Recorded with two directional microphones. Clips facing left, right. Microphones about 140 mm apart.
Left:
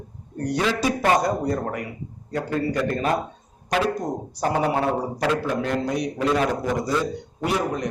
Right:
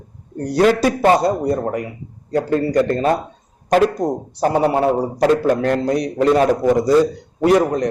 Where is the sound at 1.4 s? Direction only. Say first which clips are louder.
Right 6 dB; 25° right (ahead or behind).